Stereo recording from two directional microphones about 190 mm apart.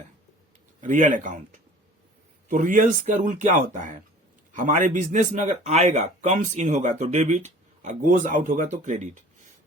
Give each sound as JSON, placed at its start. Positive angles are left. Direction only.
{"t": 0.8, "sound": "speech", "side_deg": -45}